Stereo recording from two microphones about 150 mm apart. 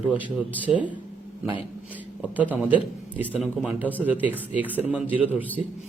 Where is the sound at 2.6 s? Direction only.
10° right (ahead or behind).